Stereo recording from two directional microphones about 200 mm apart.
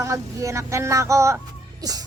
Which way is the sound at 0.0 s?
15° right (ahead or behind).